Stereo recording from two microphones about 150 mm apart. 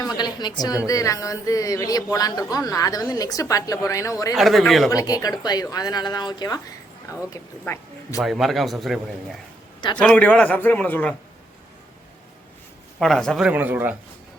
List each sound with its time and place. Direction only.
0.0 s a woman's voice: 25° left (ahead or behind)
4.4 s speech: centre (ahead or behind)
4.9 s a man's voice: 25° left (ahead or behind)
8.2 s speech: centre (ahead or behind)
10.0 s a man's voice: 10° left (ahead or behind)
13.0 s speech: 5° left (ahead or behind)
13.5 s speech: 10° right (ahead or behind)